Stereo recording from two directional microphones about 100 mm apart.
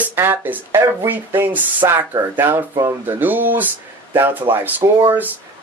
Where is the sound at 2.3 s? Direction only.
20° right (ahead or behind).